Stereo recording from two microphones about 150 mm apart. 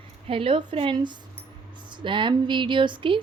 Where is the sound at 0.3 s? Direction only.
35° right (ahead or behind).